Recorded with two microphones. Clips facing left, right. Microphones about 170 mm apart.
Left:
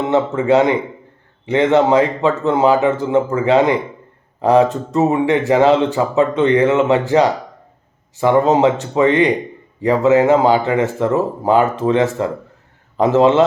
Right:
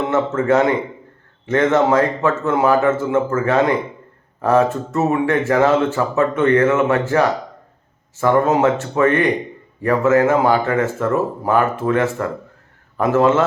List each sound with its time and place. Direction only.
0.1 s a man's voice: 15° left (ahead or behind)